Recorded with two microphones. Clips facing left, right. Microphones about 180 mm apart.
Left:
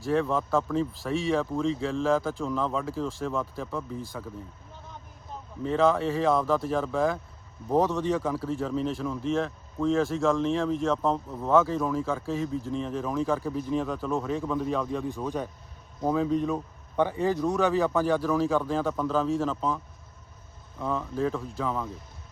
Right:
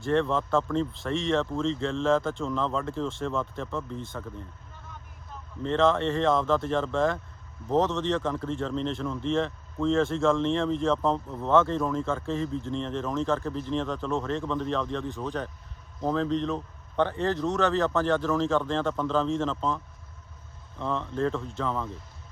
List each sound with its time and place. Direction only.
0.0 s speech: centre (ahead or behind)
5.6 s speech: 5° left (ahead or behind)